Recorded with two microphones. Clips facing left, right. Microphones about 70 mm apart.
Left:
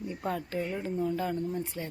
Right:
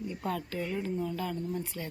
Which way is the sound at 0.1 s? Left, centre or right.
Left.